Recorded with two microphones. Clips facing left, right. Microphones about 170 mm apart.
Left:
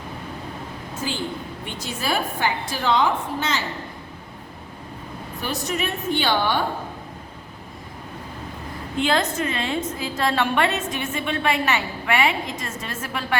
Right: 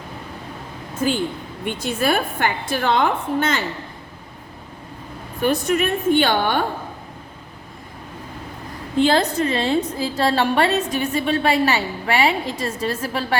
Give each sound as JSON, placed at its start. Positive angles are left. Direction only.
{"t": 1.0, "sound": "a woman's voice", "side_deg": -55}
{"t": 5.4, "sound": "a woman's voice", "side_deg": -55}
{"t": 9.0, "sound": "a woman's voice", "side_deg": -35}